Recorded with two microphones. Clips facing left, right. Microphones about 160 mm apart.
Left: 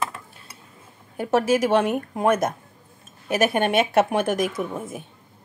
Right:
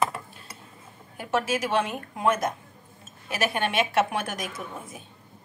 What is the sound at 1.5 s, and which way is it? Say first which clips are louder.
A woman's voice: left 7 dB; 50° left (ahead or behind).